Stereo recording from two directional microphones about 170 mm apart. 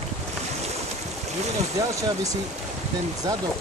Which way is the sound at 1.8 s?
20° right (ahead or behind).